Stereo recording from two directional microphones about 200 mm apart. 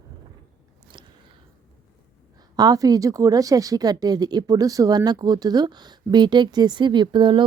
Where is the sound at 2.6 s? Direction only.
20° right (ahead or behind).